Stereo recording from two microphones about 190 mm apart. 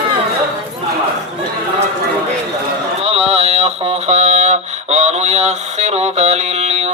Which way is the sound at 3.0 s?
35° right (ahead or behind).